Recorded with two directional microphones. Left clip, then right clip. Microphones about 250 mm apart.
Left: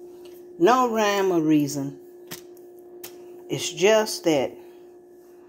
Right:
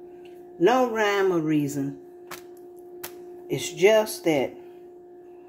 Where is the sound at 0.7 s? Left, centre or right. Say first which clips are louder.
Left 2 dB; centre.